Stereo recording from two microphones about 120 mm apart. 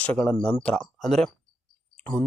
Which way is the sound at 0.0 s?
10° left (ahead or behind).